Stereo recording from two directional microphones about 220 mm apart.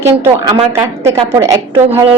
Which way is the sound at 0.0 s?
15° right (ahead or behind).